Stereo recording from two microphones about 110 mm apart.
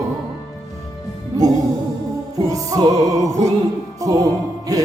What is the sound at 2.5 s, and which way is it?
Music, 30° right (ahead or behind).